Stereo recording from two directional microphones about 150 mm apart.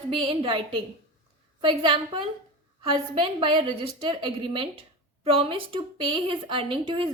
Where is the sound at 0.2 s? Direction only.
35° right (ahead or behind).